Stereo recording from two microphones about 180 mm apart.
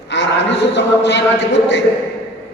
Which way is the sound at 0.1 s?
75° left (ahead or behind).